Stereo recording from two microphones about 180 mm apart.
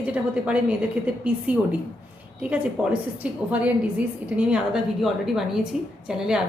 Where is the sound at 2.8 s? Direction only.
5° right (ahead or behind).